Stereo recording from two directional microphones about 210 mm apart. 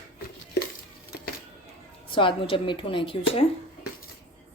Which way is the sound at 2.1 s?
25° left (ahead or behind).